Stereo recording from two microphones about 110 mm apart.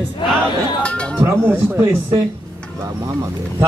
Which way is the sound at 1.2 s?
20° right (ahead or behind).